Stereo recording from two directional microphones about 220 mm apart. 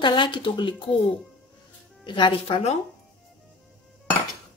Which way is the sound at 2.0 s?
20° left (ahead or behind).